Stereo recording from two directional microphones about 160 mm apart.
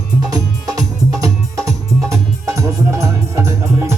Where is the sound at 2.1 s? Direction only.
20° right (ahead or behind).